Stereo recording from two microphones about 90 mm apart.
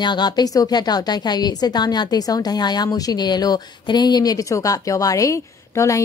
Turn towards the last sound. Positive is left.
turn(degrees=35)  # may be behind; listen again after turning